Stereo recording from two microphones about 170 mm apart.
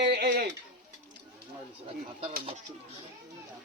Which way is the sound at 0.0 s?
70° right (ahead or behind).